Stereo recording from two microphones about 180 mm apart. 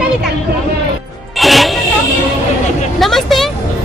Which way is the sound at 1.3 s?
Centre (ahead or behind).